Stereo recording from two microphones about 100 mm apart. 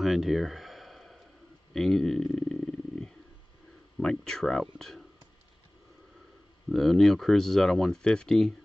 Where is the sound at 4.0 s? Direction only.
5° left (ahead or behind).